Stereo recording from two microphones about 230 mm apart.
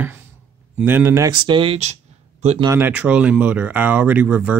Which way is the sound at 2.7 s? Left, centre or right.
Centre.